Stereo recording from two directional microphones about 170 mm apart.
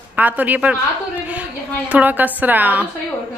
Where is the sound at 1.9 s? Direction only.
10° right (ahead or behind).